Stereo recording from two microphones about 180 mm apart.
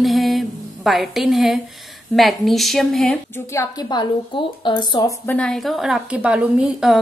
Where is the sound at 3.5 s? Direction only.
20° left (ahead or behind).